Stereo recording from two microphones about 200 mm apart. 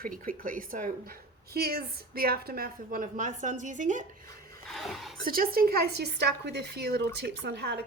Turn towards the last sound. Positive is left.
turn(degrees=-55)  # may be behind; listen again after turning